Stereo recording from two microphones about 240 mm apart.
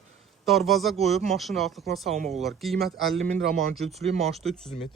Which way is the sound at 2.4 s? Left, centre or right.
Centre.